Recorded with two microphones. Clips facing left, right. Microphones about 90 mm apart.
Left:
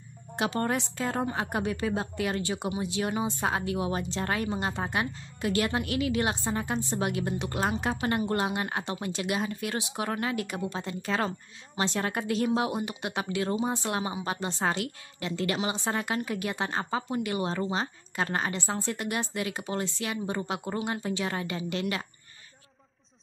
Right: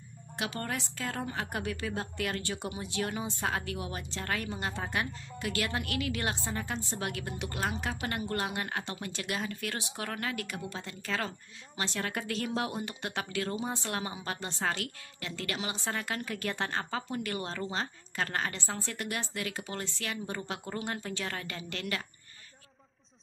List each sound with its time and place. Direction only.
0.4 s a woman's voice: 35° left (ahead or behind)